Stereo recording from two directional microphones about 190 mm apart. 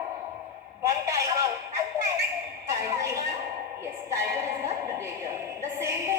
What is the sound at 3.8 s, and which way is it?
Music, 15° right (ahead or behind).